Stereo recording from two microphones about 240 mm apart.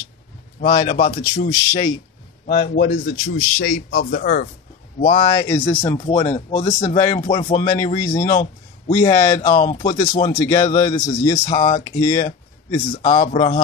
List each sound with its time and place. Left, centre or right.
0.6 s speech: left
1.5 s speech: centre
2.6 s speech: left
5.0 s speech: left
5.3 s speech: centre
8.3 s speech: left
8.9 s speech: centre
9.4 s speech: left
10.4 s speech: centre
11.3 s speech: left
11.8 s speech: centre
12.9 s speech: left